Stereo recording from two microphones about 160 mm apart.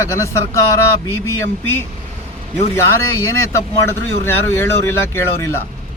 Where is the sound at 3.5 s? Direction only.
15° left (ahead or behind).